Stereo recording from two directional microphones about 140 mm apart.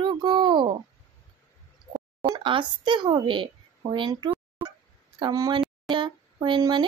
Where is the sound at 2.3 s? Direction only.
35° right (ahead or behind).